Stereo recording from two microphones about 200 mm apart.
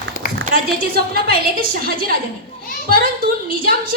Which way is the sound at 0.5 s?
50° right (ahead or behind).